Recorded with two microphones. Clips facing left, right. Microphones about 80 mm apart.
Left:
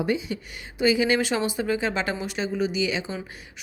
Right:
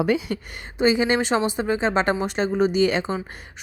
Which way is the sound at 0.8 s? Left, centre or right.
Right.